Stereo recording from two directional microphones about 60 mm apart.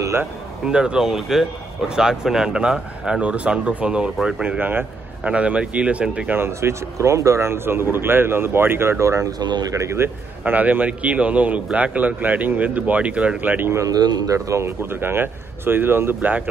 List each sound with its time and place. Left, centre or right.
0.7 s speech: centre
4.5 s speech: right
5.2 s a man's voice: centre
6.3 s speech: right
10.4 s a man's voice: right
13.8 s speech: right